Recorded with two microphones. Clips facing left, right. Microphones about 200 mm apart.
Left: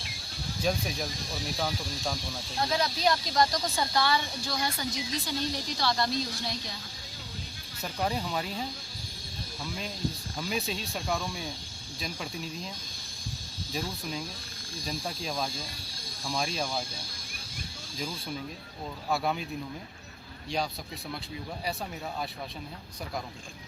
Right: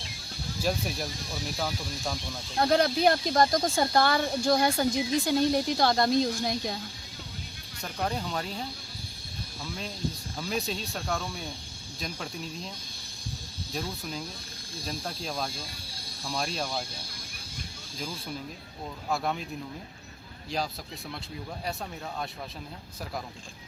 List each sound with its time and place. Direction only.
0.6 s speech: 5° right (ahead or behind)
2.6 s speech: 60° right (ahead or behind)
7.8 s speech: 5° left (ahead or behind)
10.3 s speech: centre (ahead or behind)
14.8 s speech: centre (ahead or behind)
19.1 s speech: centre (ahead or behind)